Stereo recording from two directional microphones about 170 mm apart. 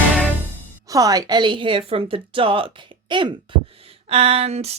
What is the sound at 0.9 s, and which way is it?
A woman's voice, 20° right (ahead or behind).